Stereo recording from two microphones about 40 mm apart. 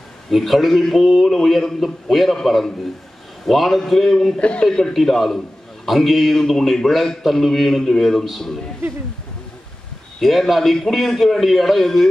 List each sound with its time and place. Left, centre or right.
0.3 s a man's voice: centre
4.4 s speech: left
4.6 s a man's voice: centre
4.9 s a man's voice: centre
10.2 s a man's voice: centre